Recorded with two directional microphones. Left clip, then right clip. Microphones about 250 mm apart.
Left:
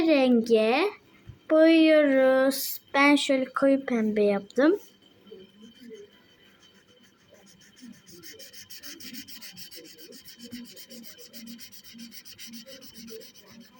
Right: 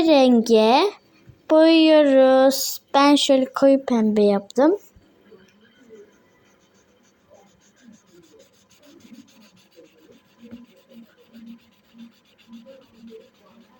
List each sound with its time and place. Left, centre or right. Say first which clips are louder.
0.0 s a woman's voice: right 6 dB; right
8.9 s rub: left 4 dB; left